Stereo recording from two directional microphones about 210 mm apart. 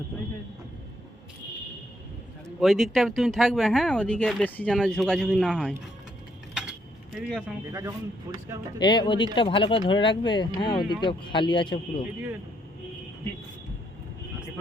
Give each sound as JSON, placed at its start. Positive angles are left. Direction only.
{"t": 2.6, "sound": "speech", "side_deg": 0}
{"t": 6.5, "sound": "cutlery", "side_deg": -5}
{"t": 7.7, "sound": "a man's voice", "side_deg": -15}
{"t": 8.8, "sound": "speech", "side_deg": 20}